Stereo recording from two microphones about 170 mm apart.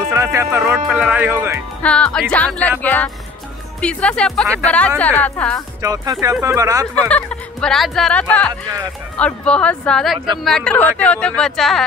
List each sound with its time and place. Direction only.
0.1 s speech: 20° right (ahead or behind)
1.8 s fowl: 5° left (ahead or behind)
3.8 s speech: 5° left (ahead or behind)
4.6 s fowl: 10° left (ahead or behind)
5.8 s speech: 20° right (ahead or behind)
7.1 s fowl: 5° left (ahead or behind)
9.1 s speech: 5° left (ahead or behind)